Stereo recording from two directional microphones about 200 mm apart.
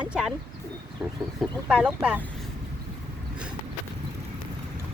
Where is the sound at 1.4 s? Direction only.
5° right (ahead or behind).